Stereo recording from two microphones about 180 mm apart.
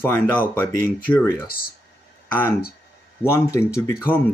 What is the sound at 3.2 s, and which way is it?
Speech, 15° left (ahead or behind).